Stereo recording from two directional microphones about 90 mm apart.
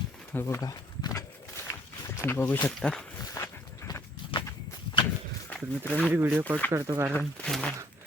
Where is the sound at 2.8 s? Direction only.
10° left (ahead or behind).